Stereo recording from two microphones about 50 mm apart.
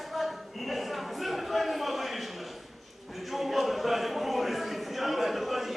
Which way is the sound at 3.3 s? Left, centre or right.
Centre.